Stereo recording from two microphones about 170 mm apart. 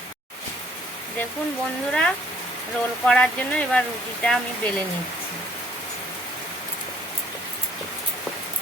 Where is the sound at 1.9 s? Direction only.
5° left (ahead or behind).